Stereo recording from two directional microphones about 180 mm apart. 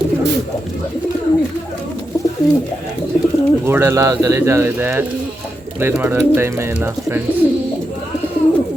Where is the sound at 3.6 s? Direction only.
15° right (ahead or behind).